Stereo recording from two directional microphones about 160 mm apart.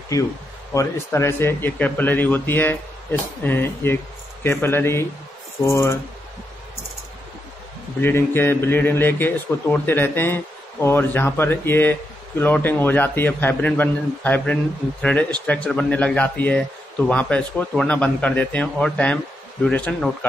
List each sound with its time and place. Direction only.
0.1 s speech: 20° left (ahead or behind)
8.0 s speech: 15° left (ahead or behind)